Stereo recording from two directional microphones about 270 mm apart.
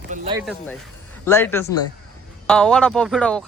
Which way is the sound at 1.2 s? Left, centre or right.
Centre.